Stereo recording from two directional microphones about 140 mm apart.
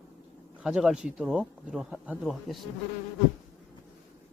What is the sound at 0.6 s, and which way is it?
Speech, 5° right (ahead or behind).